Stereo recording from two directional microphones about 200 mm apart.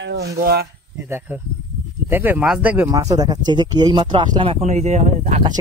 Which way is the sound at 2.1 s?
10° right (ahead or behind).